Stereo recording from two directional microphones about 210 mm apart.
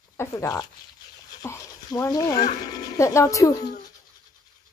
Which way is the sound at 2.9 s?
15° left (ahead or behind).